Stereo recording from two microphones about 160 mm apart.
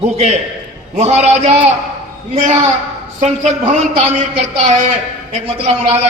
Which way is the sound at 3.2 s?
45° right (ahead or behind).